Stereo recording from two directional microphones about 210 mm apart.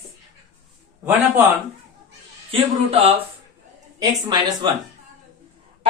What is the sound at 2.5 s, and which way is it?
A man's voice, 30° right (ahead or behind).